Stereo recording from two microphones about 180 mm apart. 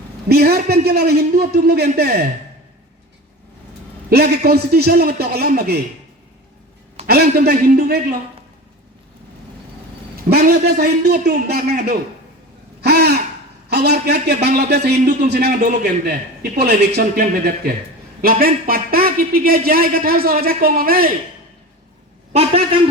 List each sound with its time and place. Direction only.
0.3 s a man's voice: 60° right (ahead or behind)
4.1 s a man's voice: 60° right (ahead or behind)
7.1 s a man's voice: 60° right (ahead or behind)
10.2 s a man's voice: 60° right (ahead or behind)
12.8 s a sound: 65° right (ahead or behind)
13.7 s a man's voice: 65° right (ahead or behind)
22.3 s a man's voice: 35° right (ahead or behind)